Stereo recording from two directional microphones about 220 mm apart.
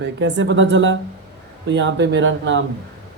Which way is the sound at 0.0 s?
55° right (ahead or behind).